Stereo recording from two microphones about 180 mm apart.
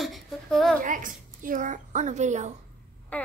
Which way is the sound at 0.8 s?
45° right (ahead or behind).